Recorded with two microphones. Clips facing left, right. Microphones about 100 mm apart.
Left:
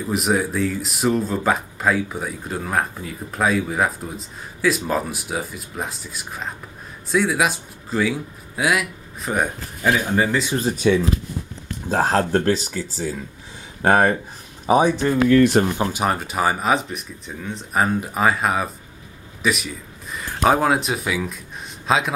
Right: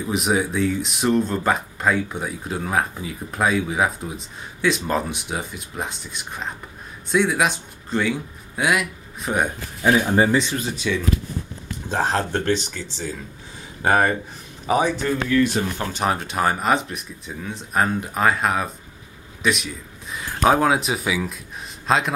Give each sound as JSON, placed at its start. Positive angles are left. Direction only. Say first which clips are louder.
{"t": 0.0, "sound": "speech", "louder": "left 1 dB", "side_deg": 0}
{"t": 10.5, "sound": "speech", "louder": "left 6 dB", "side_deg": 40}
{"t": 11.9, "sound": "speech", "louder": "left 4 dB", "side_deg": 5}
{"t": 14.7, "sound": "speech", "louder": "left 3 dB", "side_deg": 15}
{"t": 15.6, "sound": "speech", "louder": "left 6 dB", "side_deg": 55}
{"t": 15.9, "sound": "a man's voice", "louder": "left 1 dB", "side_deg": 5}